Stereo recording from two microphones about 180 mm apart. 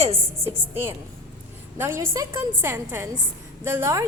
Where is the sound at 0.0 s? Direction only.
35° right (ahead or behind).